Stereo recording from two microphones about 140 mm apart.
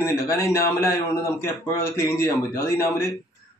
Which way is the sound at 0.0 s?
20° left (ahead or behind).